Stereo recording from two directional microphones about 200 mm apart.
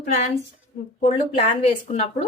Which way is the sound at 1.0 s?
30° left (ahead or behind).